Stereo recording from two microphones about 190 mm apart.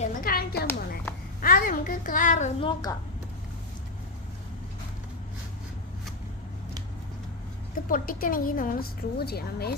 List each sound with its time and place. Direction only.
0.0 s a sound: 50° left (ahead or behind)
2.6 s a woman's voice: 25° left (ahead or behind)
7.9 s a woman's voice: 45° left (ahead or behind)